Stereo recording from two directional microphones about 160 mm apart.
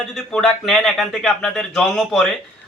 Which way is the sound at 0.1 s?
5° left (ahead or behind).